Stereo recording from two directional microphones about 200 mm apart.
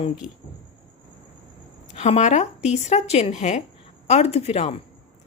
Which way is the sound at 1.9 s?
35° left (ahead or behind).